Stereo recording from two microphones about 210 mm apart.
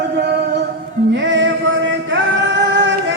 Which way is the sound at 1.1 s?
60° right (ahead or behind).